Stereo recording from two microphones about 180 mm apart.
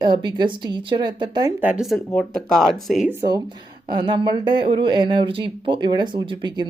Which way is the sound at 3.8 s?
25° right (ahead or behind).